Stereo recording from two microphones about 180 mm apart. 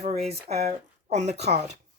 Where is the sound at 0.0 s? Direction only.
35° right (ahead or behind).